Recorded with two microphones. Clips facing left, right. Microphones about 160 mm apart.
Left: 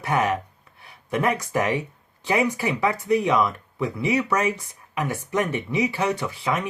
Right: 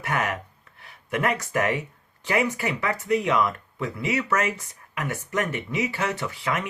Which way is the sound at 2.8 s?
15° left (ahead or behind).